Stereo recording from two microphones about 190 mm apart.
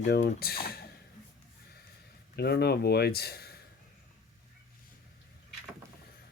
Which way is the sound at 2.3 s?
60° left (ahead or behind).